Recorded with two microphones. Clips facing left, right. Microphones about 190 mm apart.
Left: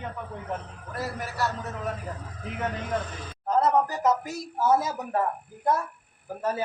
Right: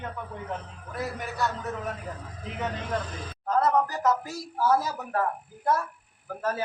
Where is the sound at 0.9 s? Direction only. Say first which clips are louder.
Even; centre (ahead or behind).